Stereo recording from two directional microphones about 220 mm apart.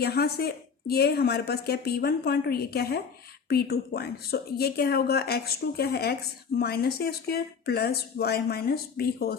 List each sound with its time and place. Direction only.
0.0 s a woman's voice: 45° left (ahead or behind)